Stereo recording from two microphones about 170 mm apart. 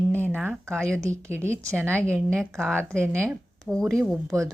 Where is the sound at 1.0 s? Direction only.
15° right (ahead or behind).